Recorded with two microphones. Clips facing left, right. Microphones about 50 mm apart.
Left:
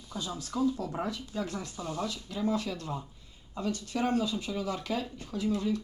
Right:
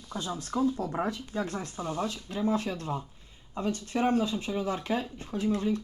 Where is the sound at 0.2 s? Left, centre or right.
Right.